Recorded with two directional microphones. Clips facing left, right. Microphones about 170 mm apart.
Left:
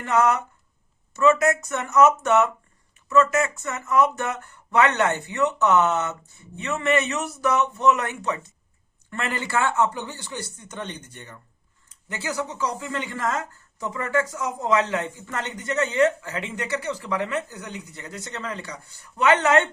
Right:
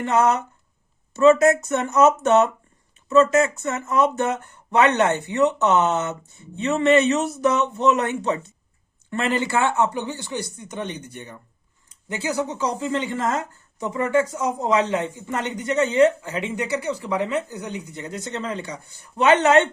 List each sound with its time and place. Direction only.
0.0 s speech: 20° right (ahead or behind)